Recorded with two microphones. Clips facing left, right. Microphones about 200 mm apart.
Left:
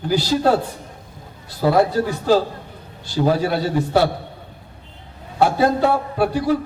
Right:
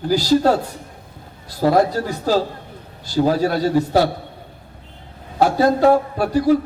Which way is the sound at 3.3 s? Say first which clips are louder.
Right 2 dB; 40° right (ahead or behind).